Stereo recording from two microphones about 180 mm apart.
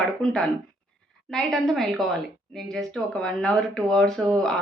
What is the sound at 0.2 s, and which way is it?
A woman's voice, 5° left (ahead or behind).